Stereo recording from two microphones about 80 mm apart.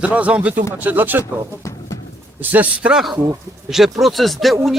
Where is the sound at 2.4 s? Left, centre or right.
Right.